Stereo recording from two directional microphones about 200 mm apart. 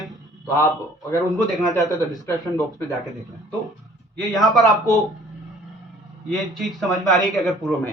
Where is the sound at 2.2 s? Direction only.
15° left (ahead or behind).